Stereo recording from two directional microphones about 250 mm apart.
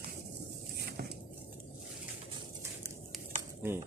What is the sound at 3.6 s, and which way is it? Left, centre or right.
Cutlery, centre.